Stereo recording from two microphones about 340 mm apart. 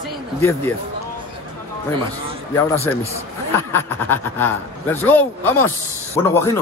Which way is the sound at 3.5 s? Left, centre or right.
Centre.